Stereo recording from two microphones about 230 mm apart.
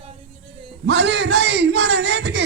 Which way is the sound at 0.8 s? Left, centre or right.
Right.